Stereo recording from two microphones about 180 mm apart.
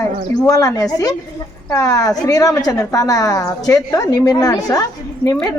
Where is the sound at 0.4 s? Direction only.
20° left (ahead or behind).